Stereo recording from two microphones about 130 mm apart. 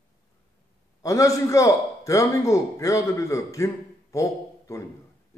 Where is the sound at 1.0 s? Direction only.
25° left (ahead or behind).